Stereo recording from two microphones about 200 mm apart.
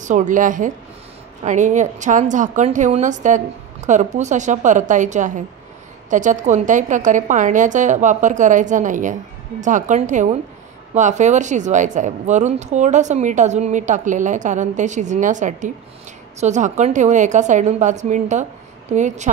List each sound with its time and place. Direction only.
0.0 s speech: 40° right (ahead or behind)